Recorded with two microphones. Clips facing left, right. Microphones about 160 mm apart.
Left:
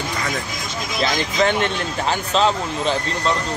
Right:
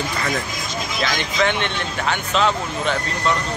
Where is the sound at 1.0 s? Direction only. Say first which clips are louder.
Left 2 dB; 35° left (ahead or behind).